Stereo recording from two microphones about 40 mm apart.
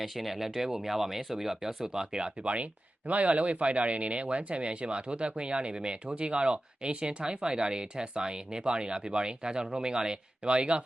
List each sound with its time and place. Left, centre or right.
0.0 s speech: centre; by 10.8 s right